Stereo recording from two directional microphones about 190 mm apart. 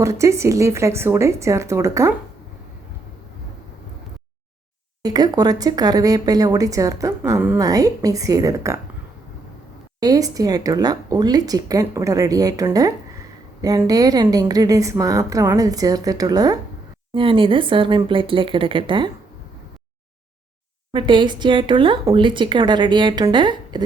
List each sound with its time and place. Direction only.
0.0 s a woman's voice: 15° right (ahead or behind)
5.0 s speech: 20° right (ahead or behind)
10.0 s speech: 20° right (ahead or behind)
20.9 s speech: 25° right (ahead or behind)